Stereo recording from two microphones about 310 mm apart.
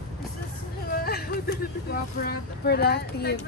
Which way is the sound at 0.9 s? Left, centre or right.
Left.